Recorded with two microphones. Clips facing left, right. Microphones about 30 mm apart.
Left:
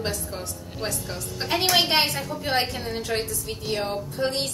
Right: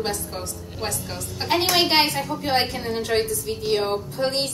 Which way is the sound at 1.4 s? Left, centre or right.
Right.